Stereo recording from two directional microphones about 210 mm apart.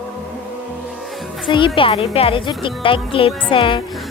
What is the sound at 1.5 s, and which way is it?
Speech, 25° left (ahead or behind).